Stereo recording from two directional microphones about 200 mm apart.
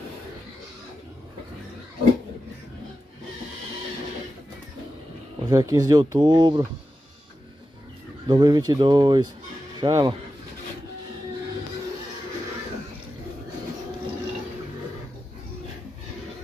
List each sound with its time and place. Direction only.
5.4 s speech: 15° right (ahead or behind)
8.3 s speech: 20° right (ahead or behind)